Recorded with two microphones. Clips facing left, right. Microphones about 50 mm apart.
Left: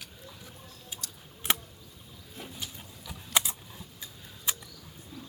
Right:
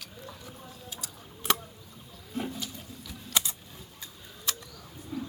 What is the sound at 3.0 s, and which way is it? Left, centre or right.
Typing, centre.